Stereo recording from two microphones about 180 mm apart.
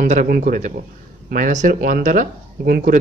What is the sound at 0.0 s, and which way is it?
Speech, 45° right (ahead or behind).